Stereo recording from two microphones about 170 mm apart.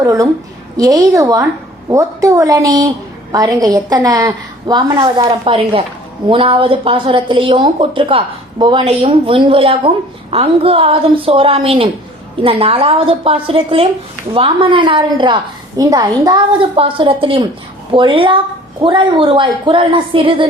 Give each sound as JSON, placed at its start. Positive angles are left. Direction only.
{"t": 0.0, "sound": "a woman's voice", "side_deg": -20}